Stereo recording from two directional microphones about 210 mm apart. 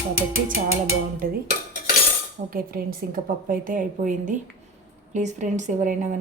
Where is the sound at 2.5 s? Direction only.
40° right (ahead or behind).